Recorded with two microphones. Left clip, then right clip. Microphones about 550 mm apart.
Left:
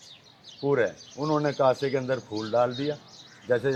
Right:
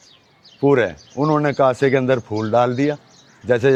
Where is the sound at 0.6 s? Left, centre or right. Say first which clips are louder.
Right 9 dB; right.